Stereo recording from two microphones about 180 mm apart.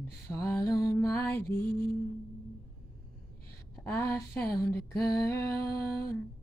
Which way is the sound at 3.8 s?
10° left (ahead or behind).